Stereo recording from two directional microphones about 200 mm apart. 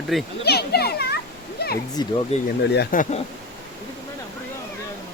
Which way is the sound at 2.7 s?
55° left (ahead or behind).